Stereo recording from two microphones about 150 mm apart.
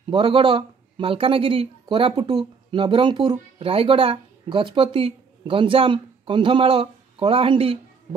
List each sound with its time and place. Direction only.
0.1 s speech: 35° right (ahead or behind)